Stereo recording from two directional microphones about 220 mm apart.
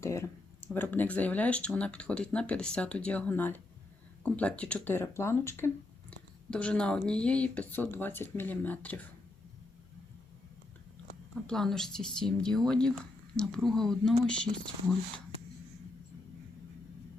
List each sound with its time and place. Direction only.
0.0 s speech: 15° left (ahead or behind)
11.4 s speech: centre (ahead or behind)